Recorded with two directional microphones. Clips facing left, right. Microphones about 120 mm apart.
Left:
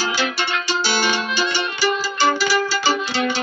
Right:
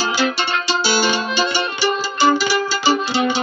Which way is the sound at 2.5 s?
20° right (ahead or behind).